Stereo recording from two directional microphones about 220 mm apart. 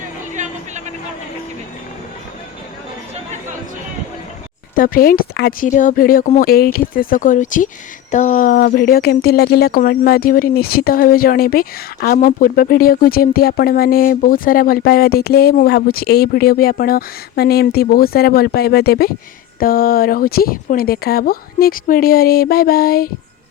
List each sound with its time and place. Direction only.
4.7 s speech: 40° left (ahead or behind)